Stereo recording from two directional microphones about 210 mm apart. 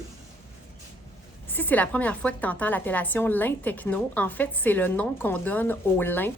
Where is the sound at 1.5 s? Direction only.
10° left (ahead or behind).